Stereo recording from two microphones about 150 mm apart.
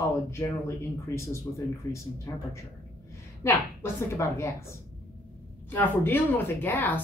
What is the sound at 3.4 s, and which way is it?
Speech, 20° left (ahead or behind).